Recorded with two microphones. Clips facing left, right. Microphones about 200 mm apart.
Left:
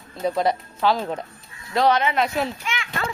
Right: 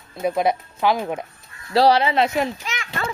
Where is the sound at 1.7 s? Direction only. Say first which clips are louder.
Right 3 dB; 35° right (ahead or behind).